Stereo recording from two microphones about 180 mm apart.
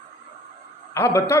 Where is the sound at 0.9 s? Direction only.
15° left (ahead or behind).